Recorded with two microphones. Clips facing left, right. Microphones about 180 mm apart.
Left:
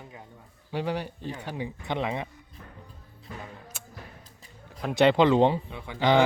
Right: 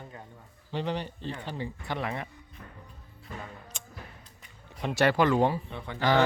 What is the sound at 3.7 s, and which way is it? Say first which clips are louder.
Music: left 1 dB; 5° left (ahead or behind).